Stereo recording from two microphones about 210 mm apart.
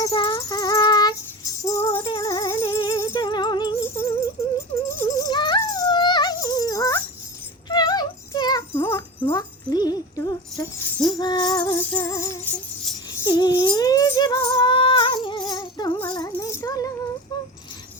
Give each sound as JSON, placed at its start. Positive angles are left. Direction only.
{"t": 0.0, "sound": "music", "side_deg": 20}
{"t": 7.7, "sound": "a sound", "side_deg": 20}
{"t": 11.2, "sound": "music", "side_deg": 20}